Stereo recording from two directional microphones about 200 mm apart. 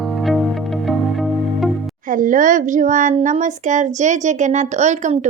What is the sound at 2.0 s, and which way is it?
Speech, 40° right (ahead or behind).